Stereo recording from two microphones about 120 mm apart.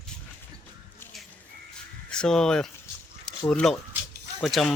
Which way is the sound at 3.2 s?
5° left (ahead or behind).